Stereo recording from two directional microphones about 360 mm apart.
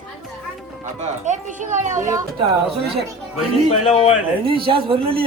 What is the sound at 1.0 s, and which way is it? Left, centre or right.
A woman's voice, centre.